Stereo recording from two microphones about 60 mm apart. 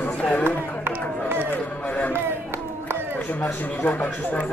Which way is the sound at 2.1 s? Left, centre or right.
Right.